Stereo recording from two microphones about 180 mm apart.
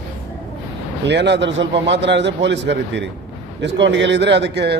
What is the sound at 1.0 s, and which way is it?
A man's voice, 75° right (ahead or behind).